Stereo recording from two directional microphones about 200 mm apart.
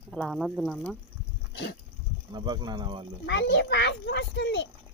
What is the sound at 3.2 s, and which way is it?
A child's voice, 60° left (ahead or behind).